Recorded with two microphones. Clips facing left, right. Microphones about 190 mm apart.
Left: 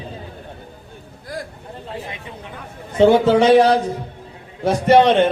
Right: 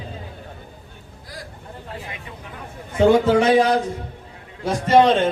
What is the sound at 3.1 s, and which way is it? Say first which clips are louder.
A man's voice: left 2 dB; 65° left (ahead or behind).